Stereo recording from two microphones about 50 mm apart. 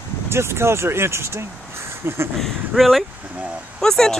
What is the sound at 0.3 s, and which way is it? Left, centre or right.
Speech, right.